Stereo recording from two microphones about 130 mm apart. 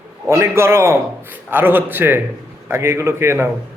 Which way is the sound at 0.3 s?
20° right (ahead or behind).